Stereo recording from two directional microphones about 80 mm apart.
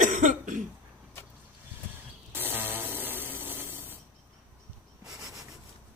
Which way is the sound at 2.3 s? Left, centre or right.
Right.